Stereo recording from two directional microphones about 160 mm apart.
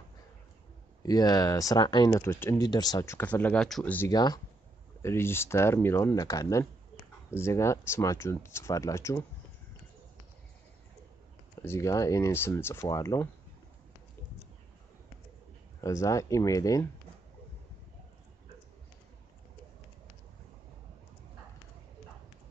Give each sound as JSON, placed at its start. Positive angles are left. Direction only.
{"t": 1.0, "sound": "speech", "side_deg": 25}
{"t": 4.1, "sound": "speech", "side_deg": 25}
{"t": 5.0, "sound": "speech", "side_deg": 15}
{"t": 11.6, "sound": "speech", "side_deg": 15}
{"t": 15.8, "sound": "speech", "side_deg": 20}